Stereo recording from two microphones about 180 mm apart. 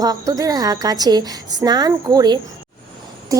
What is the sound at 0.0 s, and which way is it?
A woman's voice, 20° right (ahead or behind).